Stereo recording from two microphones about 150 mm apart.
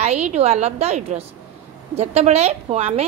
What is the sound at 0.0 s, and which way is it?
A woman's voice, 50° right (ahead or behind).